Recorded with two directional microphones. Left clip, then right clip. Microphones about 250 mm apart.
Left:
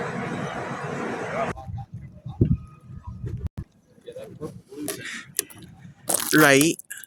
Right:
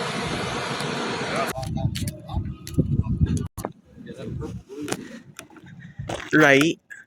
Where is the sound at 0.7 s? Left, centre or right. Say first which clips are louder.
Right 3 dB; right.